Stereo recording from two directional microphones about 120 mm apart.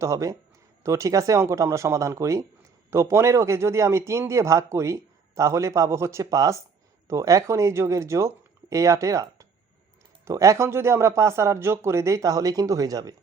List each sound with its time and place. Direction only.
0.0 s a man's voice: 25° right (ahead or behind)
10.2 s a man's voice: 25° right (ahead or behind)